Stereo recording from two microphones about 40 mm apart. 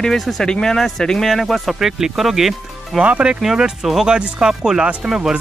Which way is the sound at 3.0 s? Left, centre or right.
Right.